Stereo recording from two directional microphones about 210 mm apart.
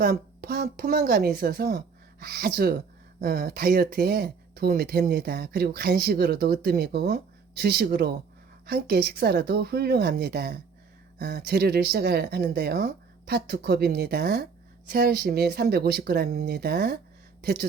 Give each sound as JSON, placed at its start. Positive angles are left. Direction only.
{"t": 0.0, "sound": "speech", "side_deg": -45}